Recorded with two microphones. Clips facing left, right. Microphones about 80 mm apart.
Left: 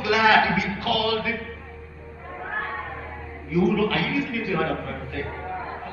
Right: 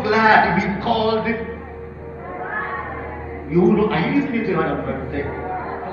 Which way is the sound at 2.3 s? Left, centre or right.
Right.